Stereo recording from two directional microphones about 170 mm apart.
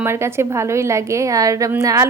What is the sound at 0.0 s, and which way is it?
A woman's voice, 15° right (ahead or behind).